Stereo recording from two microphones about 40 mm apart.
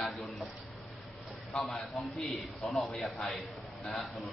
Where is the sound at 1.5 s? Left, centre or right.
Centre.